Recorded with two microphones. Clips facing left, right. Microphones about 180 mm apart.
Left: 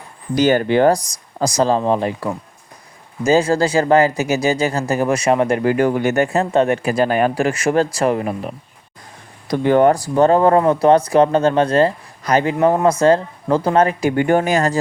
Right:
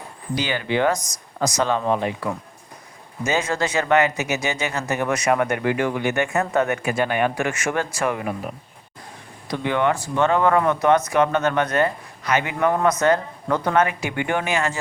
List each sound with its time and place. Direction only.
0.3 s speech: 45° left (ahead or behind)